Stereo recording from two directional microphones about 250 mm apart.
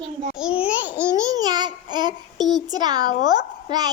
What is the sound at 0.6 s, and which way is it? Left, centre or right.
Babbling, centre.